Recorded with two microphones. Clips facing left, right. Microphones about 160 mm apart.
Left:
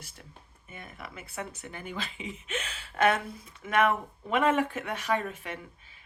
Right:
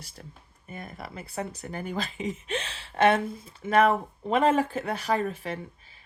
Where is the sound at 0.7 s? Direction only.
40° right (ahead or behind).